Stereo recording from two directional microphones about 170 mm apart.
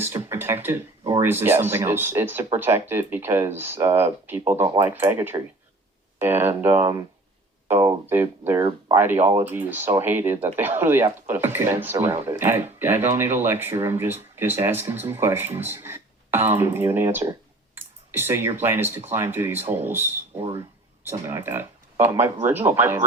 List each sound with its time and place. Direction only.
0.0 s a sound: 15° right (ahead or behind)
1.2 s speech: 10° right (ahead or behind)
20.4 s speech: 30° right (ahead or behind)
21.0 s speech: 15° right (ahead or behind)